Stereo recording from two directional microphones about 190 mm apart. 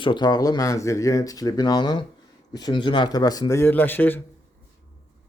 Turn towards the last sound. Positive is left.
turn(degrees=10)  # may be behind; listen again after turning